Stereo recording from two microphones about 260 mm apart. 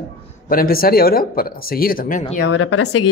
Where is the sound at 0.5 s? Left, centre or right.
Left.